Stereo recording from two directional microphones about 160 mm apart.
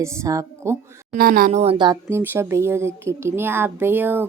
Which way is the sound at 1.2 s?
65° right (ahead or behind).